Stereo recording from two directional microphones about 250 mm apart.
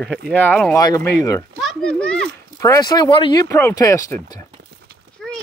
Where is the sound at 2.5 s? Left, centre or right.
Centre.